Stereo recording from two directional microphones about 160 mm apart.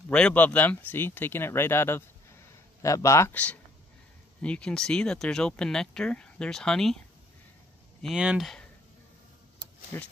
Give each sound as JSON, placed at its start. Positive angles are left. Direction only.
{"t": 0.1, "sound": "speech", "side_deg": 10}
{"t": 8.0, "sound": "speech", "side_deg": -5}
{"t": 9.9, "sound": "speech", "side_deg": 15}